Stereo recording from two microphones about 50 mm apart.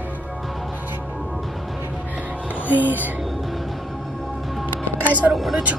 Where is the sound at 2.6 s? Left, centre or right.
Right.